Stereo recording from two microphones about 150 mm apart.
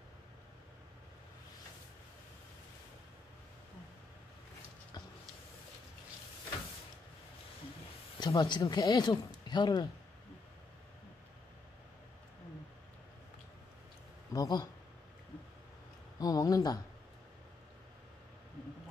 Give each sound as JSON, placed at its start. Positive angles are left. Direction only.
{"t": 8.2, "sound": "speech", "side_deg": 30}
{"t": 14.3, "sound": "speech", "side_deg": 25}
{"t": 16.2, "sound": "speech", "side_deg": 25}